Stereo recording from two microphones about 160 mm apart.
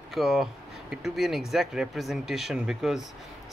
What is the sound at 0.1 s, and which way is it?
Speech, centre (ahead or behind).